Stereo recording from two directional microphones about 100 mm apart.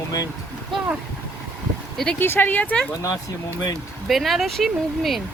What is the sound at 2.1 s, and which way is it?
Speech, 20° left (ahead or behind).